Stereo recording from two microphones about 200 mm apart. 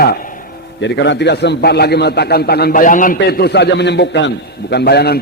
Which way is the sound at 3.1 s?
50° left (ahead or behind).